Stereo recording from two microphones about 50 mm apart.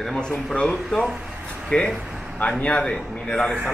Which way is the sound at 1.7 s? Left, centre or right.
Left.